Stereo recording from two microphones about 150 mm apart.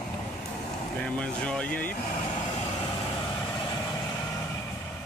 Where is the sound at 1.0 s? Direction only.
10° left (ahead or behind).